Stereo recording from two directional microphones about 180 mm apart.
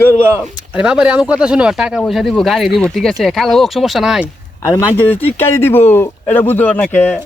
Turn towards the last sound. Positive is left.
turn(degrees=10)  # may be behind; listen again after turning